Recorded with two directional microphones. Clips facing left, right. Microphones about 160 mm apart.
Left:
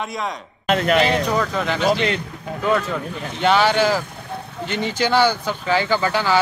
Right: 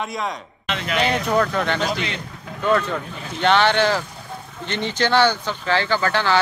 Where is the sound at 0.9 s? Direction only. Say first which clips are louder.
Right 3 dB; centre (ahead or behind).